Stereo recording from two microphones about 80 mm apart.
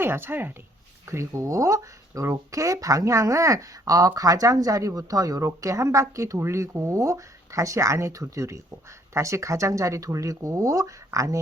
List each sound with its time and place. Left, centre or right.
0.0 s speech: right